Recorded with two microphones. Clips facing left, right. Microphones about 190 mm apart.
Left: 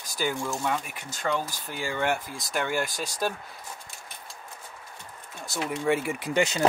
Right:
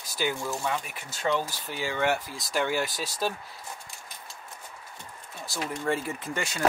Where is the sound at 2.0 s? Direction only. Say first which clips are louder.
Right 1 dB; 50° left (ahead or behind).